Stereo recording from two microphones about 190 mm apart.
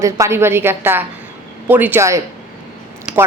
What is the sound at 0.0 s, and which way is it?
A man's voice, 15° right (ahead or behind).